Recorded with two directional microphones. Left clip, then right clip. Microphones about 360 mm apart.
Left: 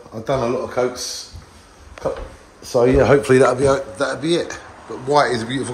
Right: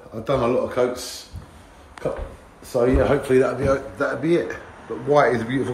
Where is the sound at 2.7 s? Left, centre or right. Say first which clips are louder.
Left 5 dB; left.